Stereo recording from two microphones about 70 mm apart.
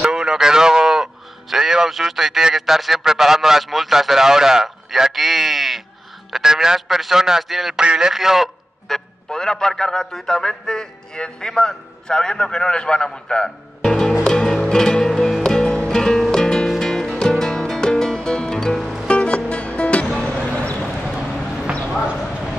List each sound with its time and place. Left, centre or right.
0.0 s a man's voice: centre
7.8 s a man's voice: centre
14.2 s music: centre
19.0 s music: centre
20.4 s a sound: centre
22.0 s a sound: centre